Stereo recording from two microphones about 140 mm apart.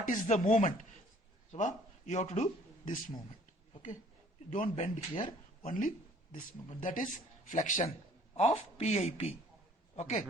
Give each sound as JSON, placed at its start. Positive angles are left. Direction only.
{"t": 0.0, "sound": "chopping", "side_deg": 65}
{"t": 1.5, "sound": "speech", "side_deg": 60}
{"t": 4.4, "sound": "chopping", "side_deg": 65}
{"t": 6.3, "sound": "speech", "side_deg": 70}
{"t": 7.5, "sound": "chopping", "side_deg": 60}
{"t": 8.4, "sound": "a man's voice", "side_deg": 50}